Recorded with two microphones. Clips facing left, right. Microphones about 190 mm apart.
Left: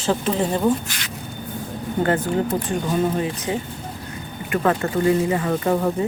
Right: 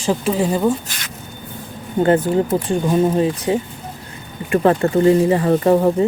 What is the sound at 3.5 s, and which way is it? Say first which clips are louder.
Speech: right 6 dB; 30° right (ahead or behind).